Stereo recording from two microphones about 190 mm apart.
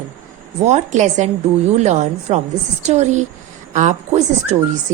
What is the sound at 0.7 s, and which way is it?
A woman's voice, 40° right (ahead or behind).